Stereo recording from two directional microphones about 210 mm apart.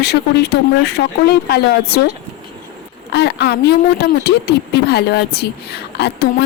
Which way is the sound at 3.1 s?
55° left (ahead or behind).